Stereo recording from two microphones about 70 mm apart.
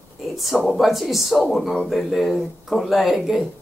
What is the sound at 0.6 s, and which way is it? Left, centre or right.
Speech, centre.